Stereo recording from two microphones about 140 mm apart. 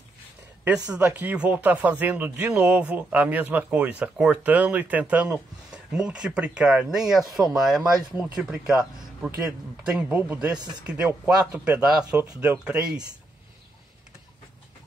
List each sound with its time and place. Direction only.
0.8 s speech: 10° right (ahead or behind)
10.5 s speech: 30° right (ahead or behind)
10.9 s speech: 10° right (ahead or behind)